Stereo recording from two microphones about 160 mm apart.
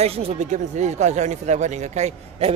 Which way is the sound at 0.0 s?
40° right (ahead or behind).